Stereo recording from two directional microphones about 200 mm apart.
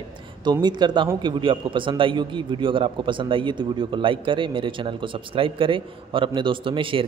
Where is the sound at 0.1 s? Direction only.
20° right (ahead or behind).